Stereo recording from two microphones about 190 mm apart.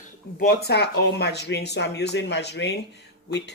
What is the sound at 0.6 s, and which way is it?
A woman's voice, 60° left (ahead or behind).